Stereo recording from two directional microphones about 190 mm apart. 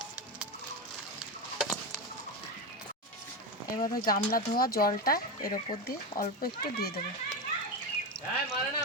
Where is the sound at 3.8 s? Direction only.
50° left (ahead or behind).